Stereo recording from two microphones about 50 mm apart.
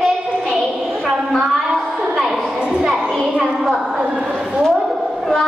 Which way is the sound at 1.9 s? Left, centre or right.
Centre.